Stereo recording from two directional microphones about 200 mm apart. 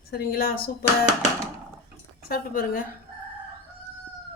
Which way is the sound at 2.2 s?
45° left (ahead or behind).